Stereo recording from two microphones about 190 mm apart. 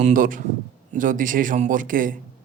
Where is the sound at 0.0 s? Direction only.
45° right (ahead or behind).